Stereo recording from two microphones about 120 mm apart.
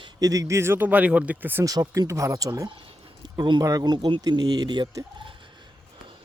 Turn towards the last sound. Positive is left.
turn(degrees=-40)  # may be behind; listen again after turning